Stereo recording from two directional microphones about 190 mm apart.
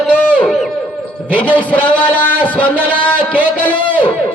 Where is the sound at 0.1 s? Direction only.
10° left (ahead or behind).